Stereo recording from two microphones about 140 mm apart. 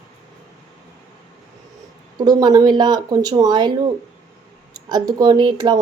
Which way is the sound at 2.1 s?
30° right (ahead or behind).